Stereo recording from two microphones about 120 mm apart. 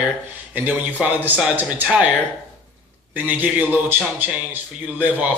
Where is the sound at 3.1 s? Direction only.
15° right (ahead or behind).